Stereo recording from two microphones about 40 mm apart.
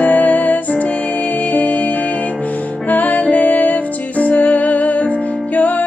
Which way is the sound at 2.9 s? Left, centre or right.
Left.